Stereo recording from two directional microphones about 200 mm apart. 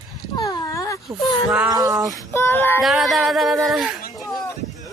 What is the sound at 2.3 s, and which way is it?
Speech, 10° left (ahead or behind).